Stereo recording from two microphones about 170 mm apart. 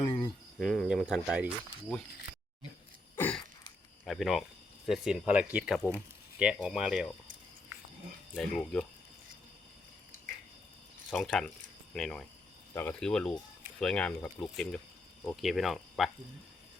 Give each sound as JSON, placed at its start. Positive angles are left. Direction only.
{"t": 0.0, "sound": "cricket", "side_deg": 30}
{"t": 0.6, "sound": "speech", "side_deg": 5}
{"t": 3.2, "sound": "a sound", "side_deg": 10}
{"t": 4.0, "sound": "speech", "side_deg": 0}
{"t": 8.4, "sound": "speech", "side_deg": 5}
{"t": 11.1, "sound": "speech", "side_deg": 0}